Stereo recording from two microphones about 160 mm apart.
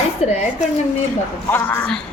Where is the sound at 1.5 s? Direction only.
10° left (ahead or behind).